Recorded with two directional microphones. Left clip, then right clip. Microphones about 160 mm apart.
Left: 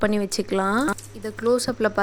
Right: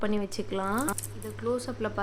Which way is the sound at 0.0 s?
40° left (ahead or behind).